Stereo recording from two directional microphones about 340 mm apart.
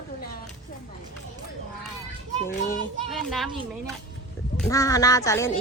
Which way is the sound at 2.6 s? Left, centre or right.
Centre.